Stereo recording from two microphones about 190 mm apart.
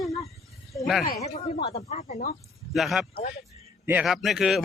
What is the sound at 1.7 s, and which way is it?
Speech, 35° left (ahead or behind).